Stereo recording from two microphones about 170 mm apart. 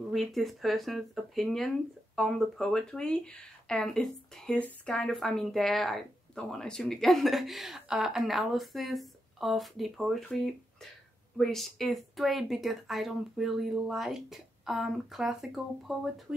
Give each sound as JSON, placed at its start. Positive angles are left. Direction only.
{"t": 0.1, "sound": "speech", "side_deg": 0}